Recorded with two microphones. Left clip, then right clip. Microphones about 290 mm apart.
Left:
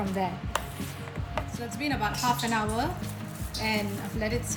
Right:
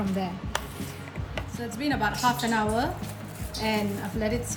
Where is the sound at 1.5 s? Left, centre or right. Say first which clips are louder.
Right 4 dB; centre.